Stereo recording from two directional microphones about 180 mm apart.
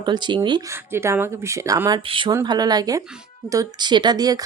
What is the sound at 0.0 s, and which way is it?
Speech, 25° right (ahead or behind).